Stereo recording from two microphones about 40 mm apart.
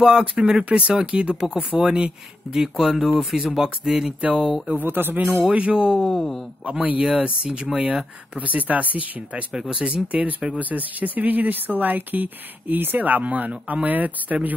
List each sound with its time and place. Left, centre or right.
0.0 s speech: right
1.3 s speech: centre
2.5 s speech: centre
4.8 s speech: right
5.5 s speech: right
5.9 s speech: centre
6.6 s speech: right
7.4 s speech: right
7.8 s speech: right
9.5 s speech: centre
10.6 s speech: right